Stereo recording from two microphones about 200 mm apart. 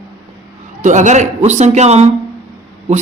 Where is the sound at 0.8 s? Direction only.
40° right (ahead or behind).